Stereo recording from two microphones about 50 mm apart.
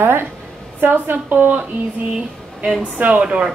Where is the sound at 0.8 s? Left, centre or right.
Right.